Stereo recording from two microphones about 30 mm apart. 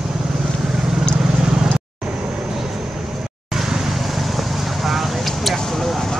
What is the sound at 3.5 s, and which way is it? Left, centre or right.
Vehicle, centre.